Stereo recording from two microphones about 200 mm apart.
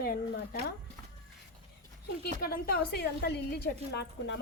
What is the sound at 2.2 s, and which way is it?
A woman's voice, 50° left (ahead or behind).